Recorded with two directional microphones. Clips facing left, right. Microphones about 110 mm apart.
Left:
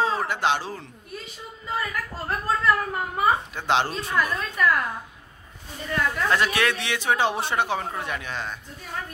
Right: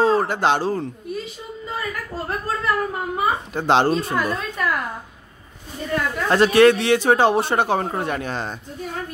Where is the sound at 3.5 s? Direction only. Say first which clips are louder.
Right 6 dB; 40° right (ahead or behind).